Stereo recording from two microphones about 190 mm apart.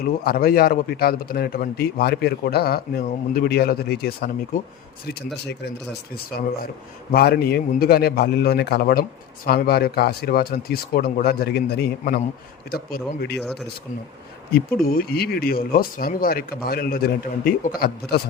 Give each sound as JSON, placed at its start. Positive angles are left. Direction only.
{"t": 0.0, "sound": "a man's voice", "side_deg": 55}
{"t": 13.4, "sound": "speech", "side_deg": 0}
{"t": 14.5, "sound": "a man's voice", "side_deg": 50}